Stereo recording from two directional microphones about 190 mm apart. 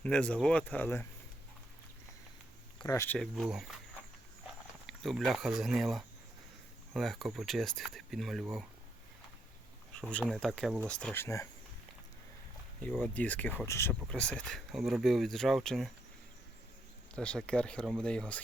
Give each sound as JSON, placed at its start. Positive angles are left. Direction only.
{"t": 0.0, "sound": "speech", "side_deg": 5}
{"t": 2.7, "sound": "speech", "side_deg": 15}
{"t": 3.2, "sound": "speech", "side_deg": 0}
{"t": 4.9, "sound": "speech", "side_deg": 0}
{"t": 9.9, "sound": "speech", "side_deg": 5}
{"t": 13.0, "sound": "speech", "side_deg": 10}
{"t": 17.2, "sound": "speech", "side_deg": 5}